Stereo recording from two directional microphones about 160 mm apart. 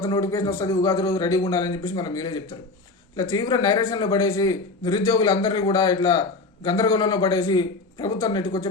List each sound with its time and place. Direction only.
0.0 s a man's voice: 20° left (ahead or behind)